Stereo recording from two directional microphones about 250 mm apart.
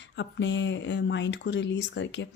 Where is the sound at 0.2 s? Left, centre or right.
Left.